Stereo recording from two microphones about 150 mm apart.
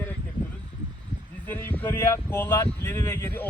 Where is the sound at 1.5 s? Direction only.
15° left (ahead or behind).